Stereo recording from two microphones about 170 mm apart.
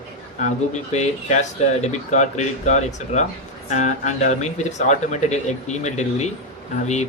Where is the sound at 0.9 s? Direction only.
40° left (ahead or behind).